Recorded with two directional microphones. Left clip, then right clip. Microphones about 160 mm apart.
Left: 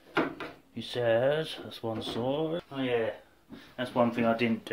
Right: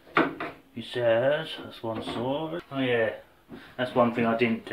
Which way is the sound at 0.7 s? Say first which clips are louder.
Right 3 dB; 70° left (ahead or behind).